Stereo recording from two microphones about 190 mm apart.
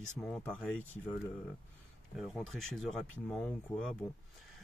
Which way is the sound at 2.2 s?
Centre (ahead or behind).